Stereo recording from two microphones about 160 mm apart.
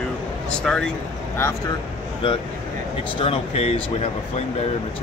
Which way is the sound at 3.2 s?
35° left (ahead or behind).